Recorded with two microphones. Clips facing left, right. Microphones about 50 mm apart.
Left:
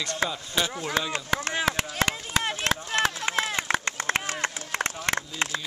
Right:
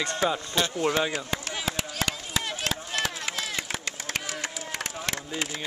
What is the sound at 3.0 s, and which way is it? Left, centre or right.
Run, left.